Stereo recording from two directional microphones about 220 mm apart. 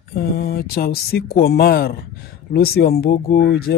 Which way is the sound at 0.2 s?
45° left (ahead or behind).